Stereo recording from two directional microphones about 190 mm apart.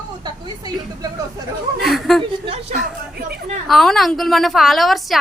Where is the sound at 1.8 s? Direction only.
Centre (ahead or behind).